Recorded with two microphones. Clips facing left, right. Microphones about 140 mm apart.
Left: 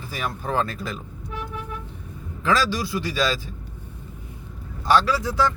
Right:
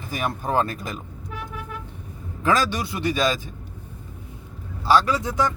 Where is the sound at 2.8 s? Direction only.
20° right (ahead or behind).